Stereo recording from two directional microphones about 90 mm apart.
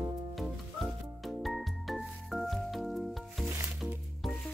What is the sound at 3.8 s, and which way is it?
Music, 20° right (ahead or behind).